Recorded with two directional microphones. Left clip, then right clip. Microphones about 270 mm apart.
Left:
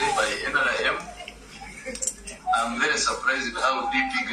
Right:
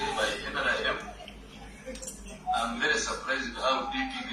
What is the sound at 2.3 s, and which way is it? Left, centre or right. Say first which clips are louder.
Music: left 5 dB; left.